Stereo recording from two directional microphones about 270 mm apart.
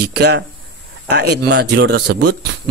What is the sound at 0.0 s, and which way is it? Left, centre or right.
A man's voice, right.